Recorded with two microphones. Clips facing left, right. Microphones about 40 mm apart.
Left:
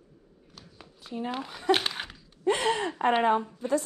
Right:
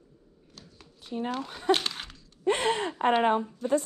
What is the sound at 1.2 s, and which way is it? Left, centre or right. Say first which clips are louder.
Speech: even; left.